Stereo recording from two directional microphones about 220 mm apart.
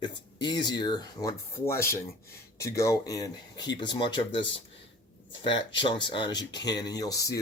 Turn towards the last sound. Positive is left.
turn(degrees=15)  # may be behind; listen again after turning